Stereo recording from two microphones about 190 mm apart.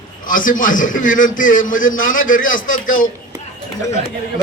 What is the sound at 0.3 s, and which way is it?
A man's voice, 45° left (ahead or behind).